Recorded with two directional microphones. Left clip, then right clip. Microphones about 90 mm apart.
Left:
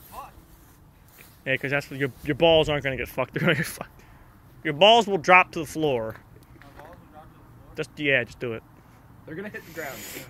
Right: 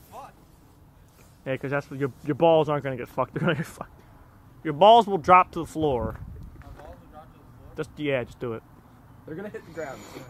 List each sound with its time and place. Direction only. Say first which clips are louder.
1.4 s speech: left 3 dB; 20° right (ahead or behind)
3.4 s speech: left 3 dB; 10° left (ahead or behind)
4.6 s speech: right 1 dB; 30° right (ahead or behind)
7.7 s speech: left 4 dB; 20° right (ahead or behind)